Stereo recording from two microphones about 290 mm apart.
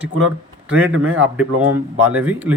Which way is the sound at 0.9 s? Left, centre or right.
Right.